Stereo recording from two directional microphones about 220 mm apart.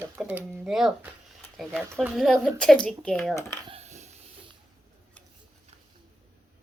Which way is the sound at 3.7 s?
30° right (ahead or behind).